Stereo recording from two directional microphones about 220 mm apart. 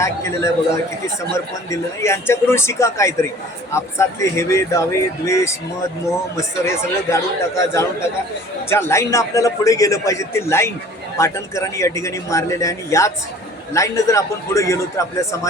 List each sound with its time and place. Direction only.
0.0 s speech: 15° left (ahead or behind)